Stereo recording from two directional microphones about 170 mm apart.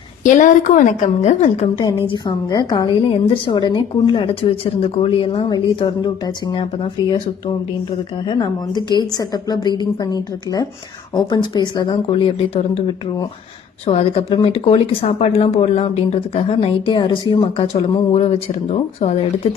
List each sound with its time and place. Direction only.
0.2 s a woman's voice: 45° left (ahead or behind)
2.0 s a woman's voice: 25° left (ahead or behind)
8.3 s a woman's voice: 25° left (ahead or behind)
13.8 s speech: 35° left (ahead or behind)
18.1 s speech: 40° left (ahead or behind)